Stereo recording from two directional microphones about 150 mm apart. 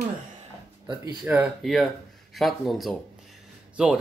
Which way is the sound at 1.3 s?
10° right (ahead or behind).